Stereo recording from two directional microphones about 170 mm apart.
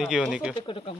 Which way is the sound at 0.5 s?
30° left (ahead or behind).